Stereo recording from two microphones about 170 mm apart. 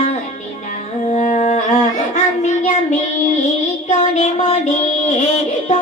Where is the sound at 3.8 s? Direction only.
40° left (ahead or behind).